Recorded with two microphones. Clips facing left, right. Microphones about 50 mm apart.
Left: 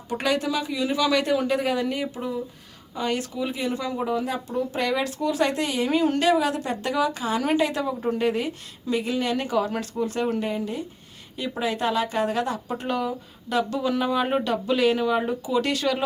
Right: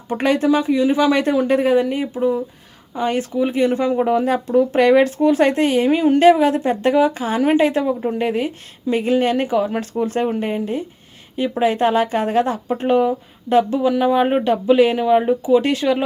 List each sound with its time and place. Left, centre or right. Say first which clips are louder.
0.1 s speech: right 8 dB; right
5.9 s speech: right 6 dB; centre
6.1 s speech: right 9 dB; right
9.5 s speech: right 5 dB; right
10.0 s speech: right 5 dB; right
13.8 s speech: right 8 dB; centre